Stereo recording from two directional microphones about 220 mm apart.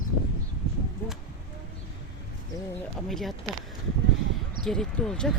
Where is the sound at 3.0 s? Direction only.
Centre (ahead or behind).